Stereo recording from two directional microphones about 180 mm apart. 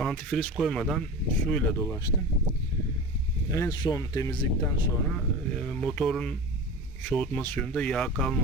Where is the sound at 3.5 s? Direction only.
20° left (ahead or behind).